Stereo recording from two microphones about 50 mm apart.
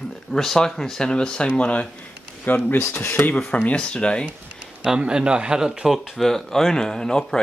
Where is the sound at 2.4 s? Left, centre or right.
Left.